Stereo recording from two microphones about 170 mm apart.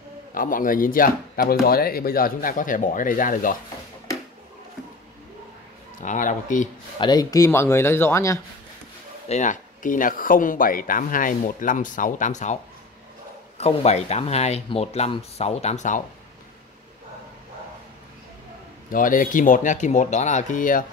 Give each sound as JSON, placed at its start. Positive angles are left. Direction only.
{"t": 0.3, "sound": "speech", "side_deg": 55}
{"t": 6.0, "sound": "speech", "side_deg": 50}
{"t": 7.0, "sound": "speech", "side_deg": 25}
{"t": 9.3, "sound": "speech", "side_deg": 45}
{"t": 13.6, "sound": "speech", "side_deg": 40}
{"t": 18.9, "sound": "speech", "side_deg": 55}